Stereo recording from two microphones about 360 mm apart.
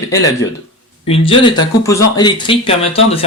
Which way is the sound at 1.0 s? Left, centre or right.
Centre.